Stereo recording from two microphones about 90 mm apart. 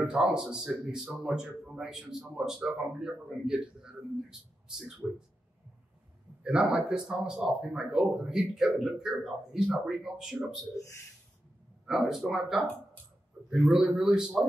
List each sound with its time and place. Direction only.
0.0 s speech: 10° right (ahead or behind)
6.4 s speech: 5° right (ahead or behind)
11.8 s speech: centre (ahead or behind)